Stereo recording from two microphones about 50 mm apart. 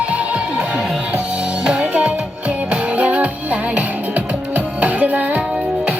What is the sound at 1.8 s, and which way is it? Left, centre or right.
Music, right.